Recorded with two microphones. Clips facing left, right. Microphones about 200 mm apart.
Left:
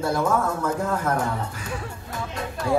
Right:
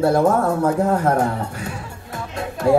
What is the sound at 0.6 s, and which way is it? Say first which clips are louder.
Speech: right 7 dB; 35° right (ahead or behind).